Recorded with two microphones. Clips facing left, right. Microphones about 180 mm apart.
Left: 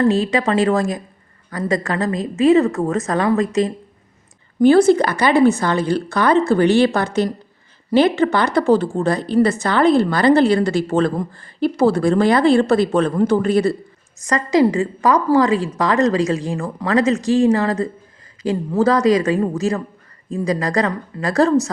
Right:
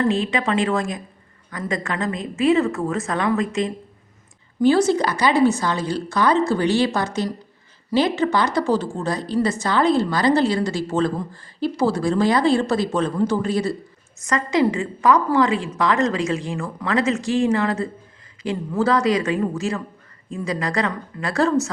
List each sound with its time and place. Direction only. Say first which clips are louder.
0.1 s a woman's voice: left 4 dB; 40° left (ahead or behind)
4.6 s a woman's voice: left 5 dB; 55° left (ahead or behind)
14.3 s a woman's voice: left 4 dB; 35° left (ahead or behind)